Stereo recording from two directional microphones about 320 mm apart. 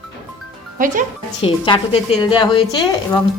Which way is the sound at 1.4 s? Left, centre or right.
Centre.